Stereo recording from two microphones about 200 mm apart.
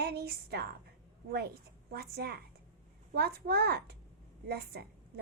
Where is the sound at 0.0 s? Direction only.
50° right (ahead or behind).